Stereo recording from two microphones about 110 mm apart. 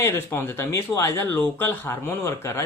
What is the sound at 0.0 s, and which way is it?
Speech, 20° left (ahead or behind).